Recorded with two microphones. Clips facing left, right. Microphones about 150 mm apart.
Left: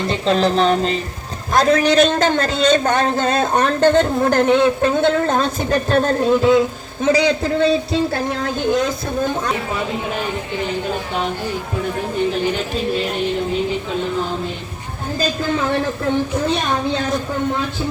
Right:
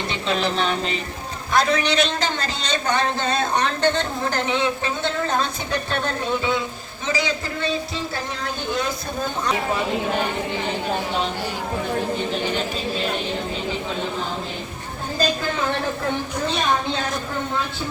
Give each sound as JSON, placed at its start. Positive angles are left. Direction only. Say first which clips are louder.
{"t": 0.1, "sound": "music", "louder": "left 8 dB", "side_deg": 40}
{"t": 1.5, "sound": "a man's voice", "louder": "left 6 dB", "side_deg": 40}
{"t": 7.0, "sound": "speech", "louder": "left 9 dB", "side_deg": 65}